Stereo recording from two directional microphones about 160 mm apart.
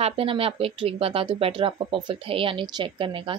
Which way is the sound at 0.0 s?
35° right (ahead or behind).